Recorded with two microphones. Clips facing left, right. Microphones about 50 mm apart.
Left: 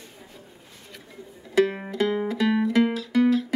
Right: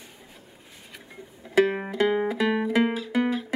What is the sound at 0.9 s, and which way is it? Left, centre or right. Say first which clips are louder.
Music: left 1 dB; centre.